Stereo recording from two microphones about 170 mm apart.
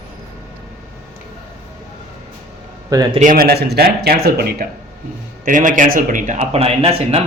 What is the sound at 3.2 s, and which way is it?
Speech, 55° right (ahead or behind).